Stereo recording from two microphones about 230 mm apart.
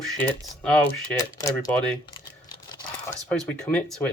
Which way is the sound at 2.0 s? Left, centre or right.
Centre.